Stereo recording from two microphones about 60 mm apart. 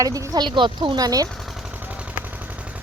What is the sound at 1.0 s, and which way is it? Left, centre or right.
Speech, right.